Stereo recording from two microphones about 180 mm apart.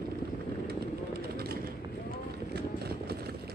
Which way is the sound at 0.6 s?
60° right (ahead or behind).